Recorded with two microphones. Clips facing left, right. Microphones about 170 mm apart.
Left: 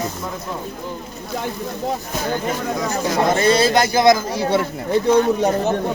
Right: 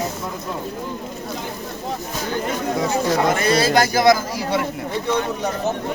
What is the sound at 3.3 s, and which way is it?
Speech, 25° left (ahead or behind).